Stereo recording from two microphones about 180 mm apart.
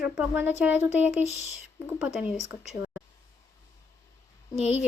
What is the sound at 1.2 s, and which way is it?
Speech, 40° left (ahead or behind).